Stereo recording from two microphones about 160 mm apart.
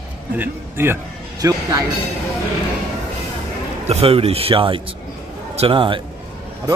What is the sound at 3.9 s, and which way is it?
Speech, 40° right (ahead or behind).